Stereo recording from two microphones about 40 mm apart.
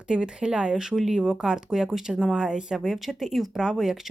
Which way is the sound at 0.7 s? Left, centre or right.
Centre.